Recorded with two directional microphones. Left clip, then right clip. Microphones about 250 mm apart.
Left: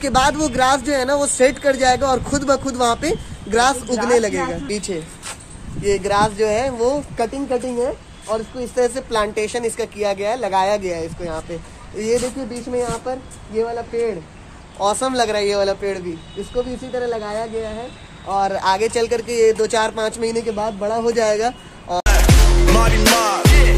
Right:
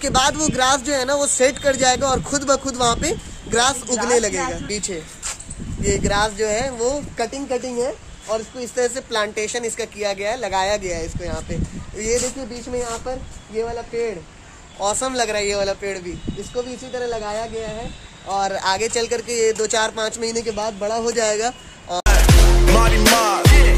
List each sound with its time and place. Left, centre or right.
0.0 s speech: centre
4.6 s a woman's voice: centre
14.8 s speech: centre